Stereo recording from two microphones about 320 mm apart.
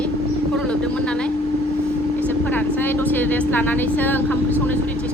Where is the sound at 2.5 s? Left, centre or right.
Centre.